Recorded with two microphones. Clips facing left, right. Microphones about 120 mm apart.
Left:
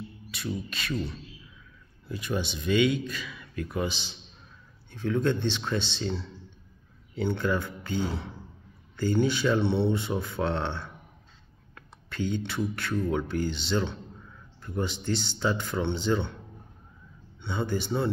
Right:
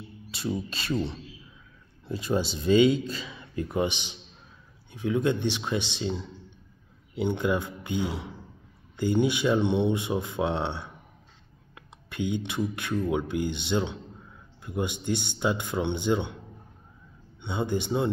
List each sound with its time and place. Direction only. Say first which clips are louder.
0.3 s a man's voice: right 4 dB; 30° right (ahead or behind)
17.4 s speech: right 1 dB; 20° right (ahead or behind)